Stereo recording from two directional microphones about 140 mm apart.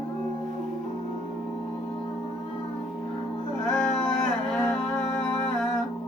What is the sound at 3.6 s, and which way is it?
Music, 5° left (ahead or behind).